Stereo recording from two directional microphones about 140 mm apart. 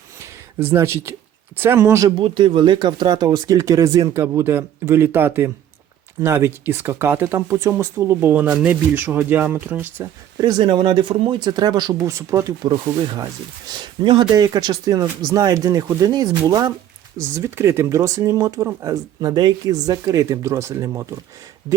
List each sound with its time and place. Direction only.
0.6 s speech: 15° right (ahead or behind)
2.0 s speech: 35° right (ahead or behind); by 10.1 s 15° right (ahead or behind)
10.3 s speech: 30° right (ahead or behind)